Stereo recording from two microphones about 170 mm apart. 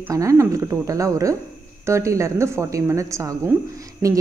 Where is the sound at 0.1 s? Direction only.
20° right (ahead or behind).